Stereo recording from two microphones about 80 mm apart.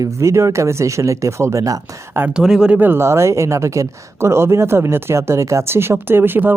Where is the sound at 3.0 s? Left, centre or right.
Right.